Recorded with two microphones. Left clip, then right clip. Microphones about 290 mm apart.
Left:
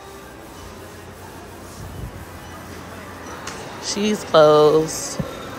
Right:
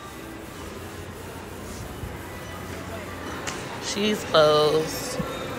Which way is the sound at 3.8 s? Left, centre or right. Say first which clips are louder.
Left 3 dB; centre.